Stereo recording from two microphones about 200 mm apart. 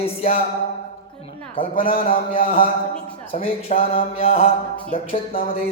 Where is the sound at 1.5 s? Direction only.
25° left (ahead or behind).